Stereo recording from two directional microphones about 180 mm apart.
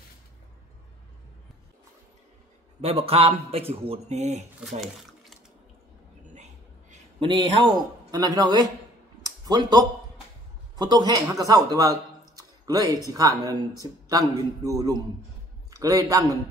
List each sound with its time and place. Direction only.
2.8 s a man's voice: 35° right (ahead or behind)
4.6 s water: centre (ahead or behind)
6.3 s a sound: 40° right (ahead or behind)
7.2 s a man's voice: 25° right (ahead or behind)
9.2 s a sound: 20° right (ahead or behind)
10.8 s a man's voice: 25° right (ahead or behind)